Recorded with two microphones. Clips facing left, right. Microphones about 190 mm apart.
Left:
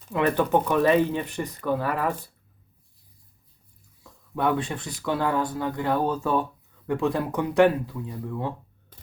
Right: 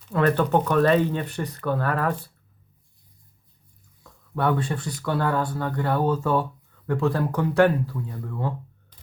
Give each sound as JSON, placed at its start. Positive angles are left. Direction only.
{"t": 0.1, "sound": "speech", "side_deg": 10}
{"t": 4.4, "sound": "speech", "side_deg": 10}